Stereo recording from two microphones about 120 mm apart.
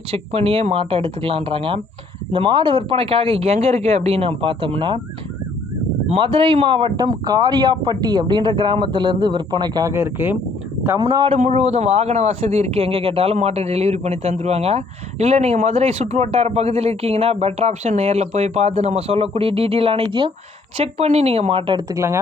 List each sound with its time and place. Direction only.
0.1 s speech: 55° right (ahead or behind)
6.1 s speech: 45° right (ahead or behind)
9.9 s speech: 20° right (ahead or behind)
11.0 s speech: 40° right (ahead or behind)
11.3 s speech: 70° right (ahead or behind); by 20.3 s 45° right (ahead or behind)
20.7 s speech: 60° right (ahead or behind)
21.8 s speech: 30° right (ahead or behind)